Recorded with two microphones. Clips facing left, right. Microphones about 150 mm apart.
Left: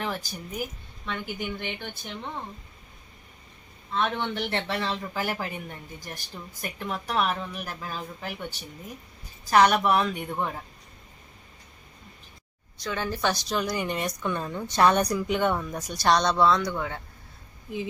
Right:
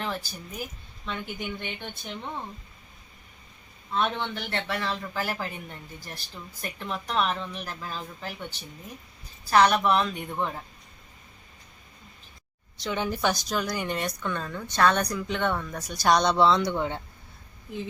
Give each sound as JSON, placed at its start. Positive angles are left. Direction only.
{"t": 0.0, "sound": "speech", "side_deg": 10}
{"t": 4.2, "sound": "speech", "side_deg": 20}
{"t": 12.8, "sound": "speech", "side_deg": -20}
{"t": 13.5, "sound": "speech", "side_deg": 0}
{"t": 14.3, "sound": "speech", "side_deg": 15}
{"t": 15.9, "sound": "speech", "side_deg": -10}